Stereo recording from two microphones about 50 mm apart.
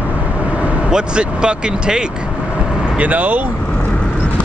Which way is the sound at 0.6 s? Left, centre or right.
Centre.